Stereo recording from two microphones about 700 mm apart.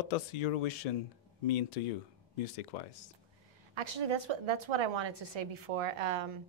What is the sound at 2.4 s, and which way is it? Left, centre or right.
Speech, left.